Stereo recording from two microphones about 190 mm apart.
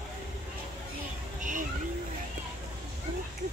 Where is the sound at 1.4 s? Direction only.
45° right (ahead or behind).